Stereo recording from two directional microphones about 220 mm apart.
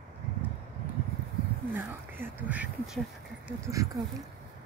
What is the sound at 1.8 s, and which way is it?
Speech, 10° right (ahead or behind).